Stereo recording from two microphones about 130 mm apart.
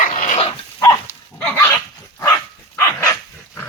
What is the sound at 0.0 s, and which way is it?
Dog, 90° left.